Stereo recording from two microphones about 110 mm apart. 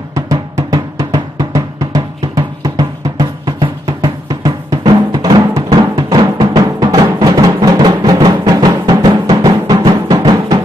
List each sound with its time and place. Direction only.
0.1 s drum: 35° right (ahead or behind)
5.9 s music: 40° right (ahead or behind)